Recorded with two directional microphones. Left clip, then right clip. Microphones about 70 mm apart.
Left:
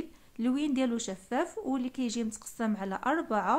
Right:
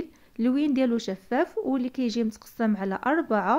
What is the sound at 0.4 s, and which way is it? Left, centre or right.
Speech, right.